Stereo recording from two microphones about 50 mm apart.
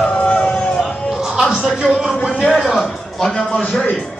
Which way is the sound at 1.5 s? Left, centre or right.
Centre.